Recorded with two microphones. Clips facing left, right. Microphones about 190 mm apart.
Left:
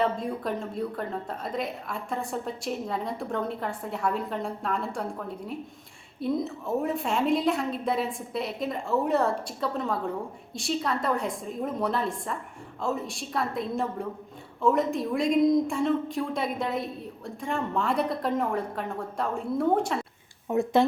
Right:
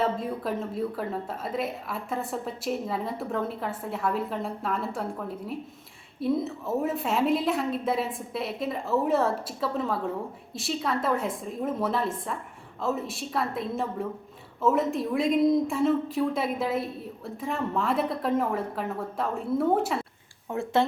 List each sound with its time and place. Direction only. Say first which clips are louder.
0.0 s a woman's voice: even; centre (ahead or behind)
6.1 s a woman's voice: right 1 dB; centre (ahead or behind)
20.5 s speech: left 3 dB; 15° left (ahead or behind)